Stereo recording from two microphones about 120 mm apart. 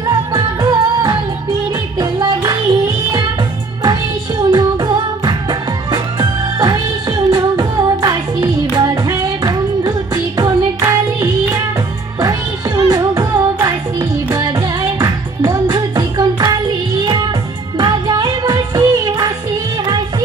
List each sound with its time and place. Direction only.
0.1 s music: 35° right (ahead or behind)
4.5 s music: 35° right (ahead or behind)
17.7 s music: 35° right (ahead or behind)